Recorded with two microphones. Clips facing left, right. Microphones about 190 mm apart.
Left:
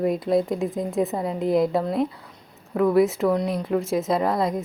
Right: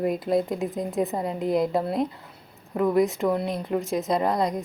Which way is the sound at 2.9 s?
Centre (ahead or behind).